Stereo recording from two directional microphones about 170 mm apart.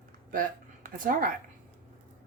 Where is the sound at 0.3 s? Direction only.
55° right (ahead or behind).